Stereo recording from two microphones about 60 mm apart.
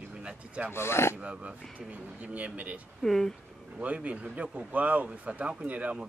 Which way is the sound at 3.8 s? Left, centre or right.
Right.